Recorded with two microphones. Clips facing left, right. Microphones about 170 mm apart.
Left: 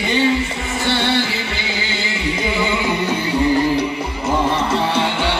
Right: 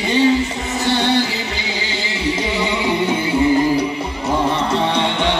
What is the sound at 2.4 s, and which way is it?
Music, 30° right (ahead or behind).